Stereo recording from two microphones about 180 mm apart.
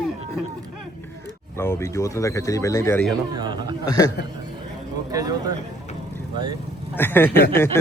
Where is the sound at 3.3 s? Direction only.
25° right (ahead or behind).